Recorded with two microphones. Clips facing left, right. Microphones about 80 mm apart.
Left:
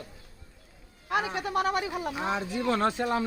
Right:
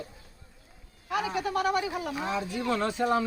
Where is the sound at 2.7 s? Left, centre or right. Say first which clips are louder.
Left 1 dB; left.